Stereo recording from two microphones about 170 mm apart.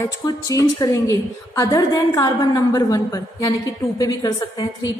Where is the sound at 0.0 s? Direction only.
20° left (ahead or behind).